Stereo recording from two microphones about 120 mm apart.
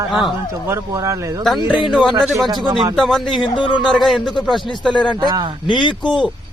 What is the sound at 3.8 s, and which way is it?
Speech, centre (ahead or behind).